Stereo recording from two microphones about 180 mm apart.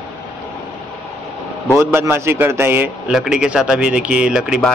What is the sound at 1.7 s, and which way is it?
A man's voice, 15° right (ahead or behind).